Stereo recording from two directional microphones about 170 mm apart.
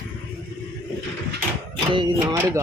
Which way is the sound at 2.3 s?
15° right (ahead or behind).